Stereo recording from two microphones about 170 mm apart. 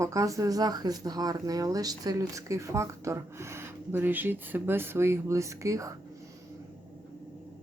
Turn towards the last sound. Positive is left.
turn(degrees=-20)  # may be behind; listen again after turning